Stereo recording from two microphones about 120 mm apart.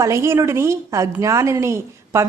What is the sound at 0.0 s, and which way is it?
A woman's voice, 25° right (ahead or behind).